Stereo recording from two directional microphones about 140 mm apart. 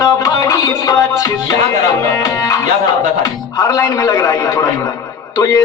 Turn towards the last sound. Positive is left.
turn(degrees=25)  # may be behind; listen again after turning